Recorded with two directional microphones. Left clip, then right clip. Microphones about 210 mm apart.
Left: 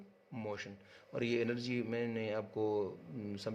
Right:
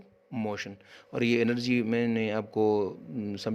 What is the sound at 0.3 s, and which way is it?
Speech, 45° right (ahead or behind).